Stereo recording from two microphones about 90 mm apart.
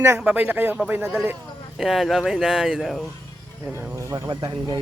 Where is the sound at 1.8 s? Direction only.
Centre (ahead or behind).